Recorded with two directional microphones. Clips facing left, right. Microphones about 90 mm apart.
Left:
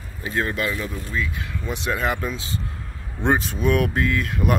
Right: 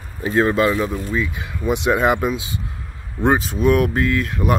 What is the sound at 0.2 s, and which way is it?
Speech, 30° right (ahead or behind).